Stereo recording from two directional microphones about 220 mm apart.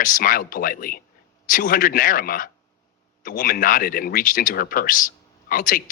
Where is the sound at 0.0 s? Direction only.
40° left (ahead or behind).